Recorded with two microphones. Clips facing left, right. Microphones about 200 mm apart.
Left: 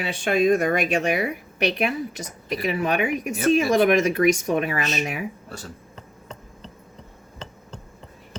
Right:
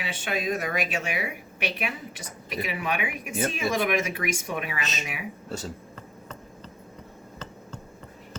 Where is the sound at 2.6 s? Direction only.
40° left (ahead or behind).